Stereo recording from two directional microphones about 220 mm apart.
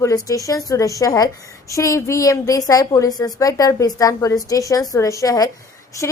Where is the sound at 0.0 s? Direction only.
15° left (ahead or behind).